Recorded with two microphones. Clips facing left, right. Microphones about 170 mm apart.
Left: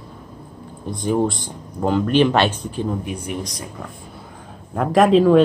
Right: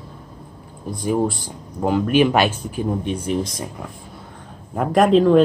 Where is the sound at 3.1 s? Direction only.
25° right (ahead or behind).